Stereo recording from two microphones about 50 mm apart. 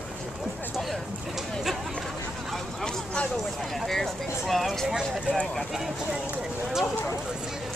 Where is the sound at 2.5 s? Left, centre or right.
Centre.